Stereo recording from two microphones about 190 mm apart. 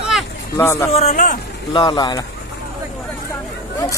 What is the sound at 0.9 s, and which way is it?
Speech, 35° left (ahead or behind).